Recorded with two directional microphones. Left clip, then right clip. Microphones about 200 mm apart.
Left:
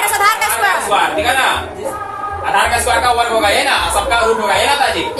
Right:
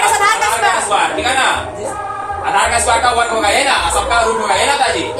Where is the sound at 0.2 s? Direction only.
40° left (ahead or behind).